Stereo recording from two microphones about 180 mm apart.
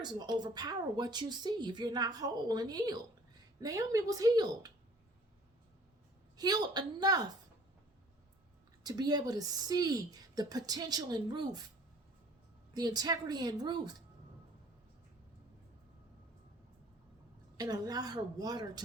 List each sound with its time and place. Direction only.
0.0 s speech: 25° right (ahead or behind)
6.3 s speech: 20° right (ahead or behind)
8.8 s speech: 20° right (ahead or behind)
12.7 s speech: 20° right (ahead or behind)
17.6 s speech: 20° right (ahead or behind)